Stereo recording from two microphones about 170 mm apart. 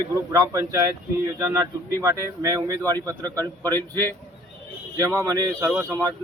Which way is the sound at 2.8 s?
15° left (ahead or behind).